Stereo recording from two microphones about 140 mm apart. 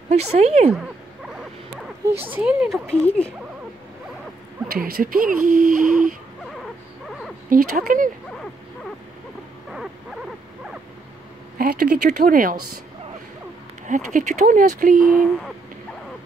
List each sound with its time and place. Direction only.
0.1 s speech: 50° right (ahead or behind)
2.3 s speech: 5° right (ahead or behind)
2.9 s speech: 10° left (ahead or behind)
4.6 s speech: 90° right
7.1 s a sound: centre (ahead or behind)
7.4 s speech: 75° right (ahead or behind)
9.7 s a sound: centre (ahead or behind)
11.5 s speech: 85° right
13.8 s speech: 65° right (ahead or behind)
15.0 s speech: centre (ahead or behind)